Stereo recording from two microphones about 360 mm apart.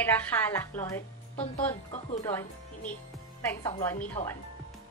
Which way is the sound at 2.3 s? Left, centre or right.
Centre.